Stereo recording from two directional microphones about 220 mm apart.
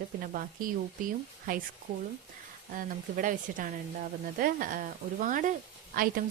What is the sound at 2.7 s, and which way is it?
Speech, 40° right (ahead or behind).